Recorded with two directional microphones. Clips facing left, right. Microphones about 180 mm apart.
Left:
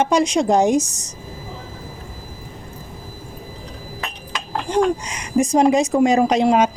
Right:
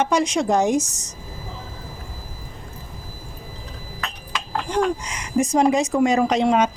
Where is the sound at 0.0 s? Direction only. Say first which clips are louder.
Left 3 dB; 15° left (ahead or behind).